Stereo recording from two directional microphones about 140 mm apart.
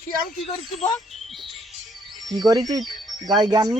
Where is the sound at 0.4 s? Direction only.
45° left (ahead or behind).